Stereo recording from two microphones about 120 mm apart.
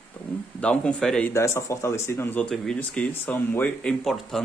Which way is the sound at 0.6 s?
10° left (ahead or behind).